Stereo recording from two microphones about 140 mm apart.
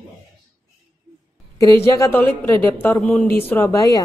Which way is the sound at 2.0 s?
20° left (ahead or behind).